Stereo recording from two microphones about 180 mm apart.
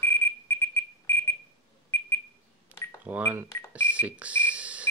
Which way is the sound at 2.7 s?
10° right (ahead or behind).